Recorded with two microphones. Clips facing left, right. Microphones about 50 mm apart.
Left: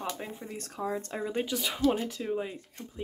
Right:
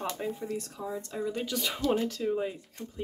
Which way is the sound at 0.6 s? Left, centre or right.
Left.